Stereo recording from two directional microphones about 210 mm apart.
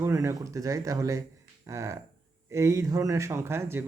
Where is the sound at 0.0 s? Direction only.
15° right (ahead or behind).